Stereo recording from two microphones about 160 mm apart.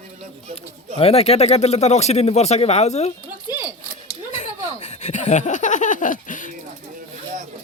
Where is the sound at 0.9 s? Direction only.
40° left (ahead or behind).